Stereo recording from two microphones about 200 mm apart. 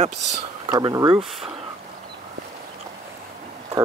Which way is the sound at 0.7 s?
20° right (ahead or behind).